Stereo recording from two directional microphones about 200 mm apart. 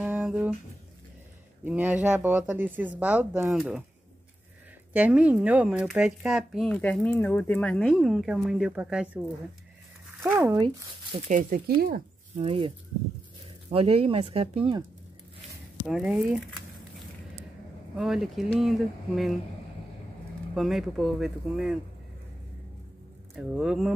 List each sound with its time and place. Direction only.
0.0 s a sound: 10° right (ahead or behind)
1.6 s speech: 10° right (ahead or behind)
4.9 s speech: 5° right (ahead or behind)
10.2 s speech: 5° right (ahead or behind)
11.1 s speech: 40° right (ahead or behind)
12.4 s speech: 30° right (ahead or behind)
15.9 s speech: 5° right (ahead or behind)
17.9 s speech: 5° right (ahead or behind)
20.5 s speech: centre (ahead or behind)
23.3 s speech: 5° right (ahead or behind)